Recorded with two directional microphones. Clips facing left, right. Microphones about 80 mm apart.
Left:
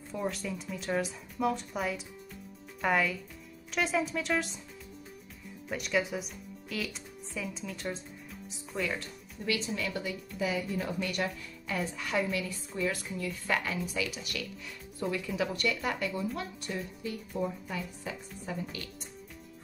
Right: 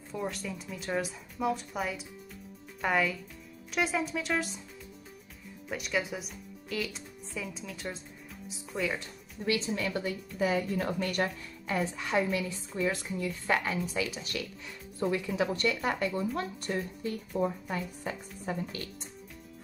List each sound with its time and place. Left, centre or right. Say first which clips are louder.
0.1 s a woman's voice: left 1 dB; centre
5.7 s speech: left 2 dB; centre
9.5 s speech: right 2 dB; right
11.6 s a woman's voice: right 3 dB; right